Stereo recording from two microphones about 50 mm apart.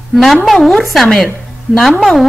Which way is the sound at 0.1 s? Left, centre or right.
Centre.